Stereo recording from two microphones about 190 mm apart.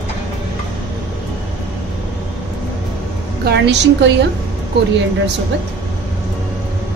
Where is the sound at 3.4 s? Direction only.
65° right (ahead or behind).